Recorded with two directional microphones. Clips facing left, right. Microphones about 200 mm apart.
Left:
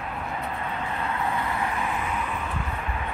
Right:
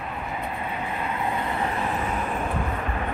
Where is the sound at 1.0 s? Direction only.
20° right (ahead or behind).